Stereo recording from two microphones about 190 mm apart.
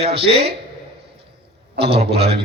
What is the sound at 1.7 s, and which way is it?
Speech, 60° right (ahead or behind).